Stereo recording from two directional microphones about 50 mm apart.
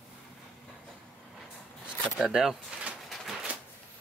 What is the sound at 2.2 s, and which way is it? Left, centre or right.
Speech, centre.